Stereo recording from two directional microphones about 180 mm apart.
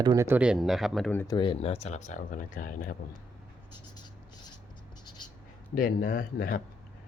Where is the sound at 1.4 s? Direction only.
30° left (ahead or behind); by 3.0 s 50° left (ahead or behind).